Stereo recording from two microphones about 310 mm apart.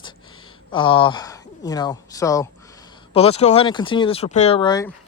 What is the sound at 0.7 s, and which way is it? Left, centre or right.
Speech, centre.